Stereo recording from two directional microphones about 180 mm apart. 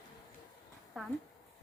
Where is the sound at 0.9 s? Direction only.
Centre (ahead or behind).